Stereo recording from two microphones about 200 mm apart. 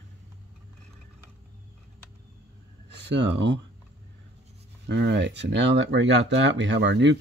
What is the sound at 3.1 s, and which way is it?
Speech, 60° right (ahead or behind).